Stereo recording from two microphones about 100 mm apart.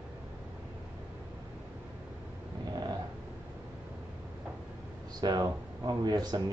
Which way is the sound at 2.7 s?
40° right (ahead or behind).